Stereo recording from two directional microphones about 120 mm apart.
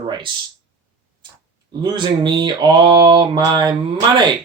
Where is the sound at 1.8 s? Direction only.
40° right (ahead or behind).